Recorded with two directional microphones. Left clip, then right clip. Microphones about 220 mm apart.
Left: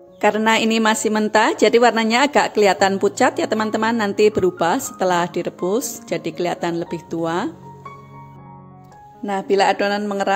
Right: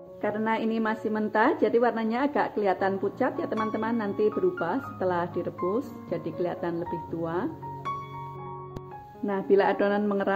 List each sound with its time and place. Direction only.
0.2 s a woman's voice: 50° left (ahead or behind)
9.2 s speech: 25° left (ahead or behind)